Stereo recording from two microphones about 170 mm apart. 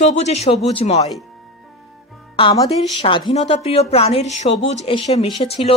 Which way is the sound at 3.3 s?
40° left (ahead or behind).